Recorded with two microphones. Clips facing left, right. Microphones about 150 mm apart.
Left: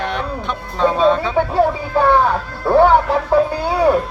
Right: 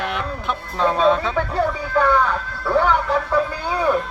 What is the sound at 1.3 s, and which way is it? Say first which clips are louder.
Speech: left 5 dB; 30° left (ahead or behind).